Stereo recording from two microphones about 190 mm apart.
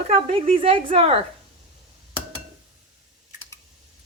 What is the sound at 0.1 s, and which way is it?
A woman's voice, 30° right (ahead or behind).